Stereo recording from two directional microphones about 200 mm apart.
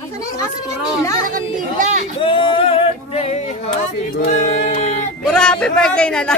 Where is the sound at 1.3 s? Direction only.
35° right (ahead or behind).